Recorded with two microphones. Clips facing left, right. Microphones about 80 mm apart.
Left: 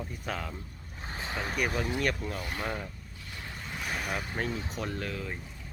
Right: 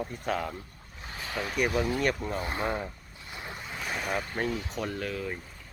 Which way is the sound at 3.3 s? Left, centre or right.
Right.